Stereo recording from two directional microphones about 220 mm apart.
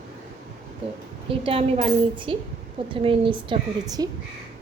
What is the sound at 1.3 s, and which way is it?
A woman's voice, 25° right (ahead or behind).